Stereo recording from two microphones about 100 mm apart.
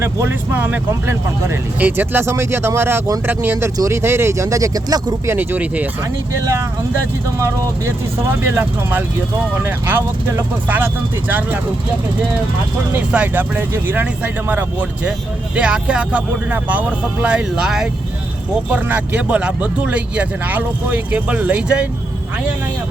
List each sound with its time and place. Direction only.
0.0 s speech: 25° right (ahead or behind); by 5.3 s 40° right (ahead or behind)
5.3 s speech: 20° right (ahead or behind)
7.3 s speech: 30° right (ahead or behind)
12.9 s speech: 15° right (ahead or behind)
18.7 s speech: 15° right (ahead or behind)